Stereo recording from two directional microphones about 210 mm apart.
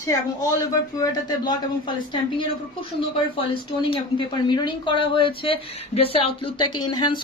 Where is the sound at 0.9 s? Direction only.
20° left (ahead or behind).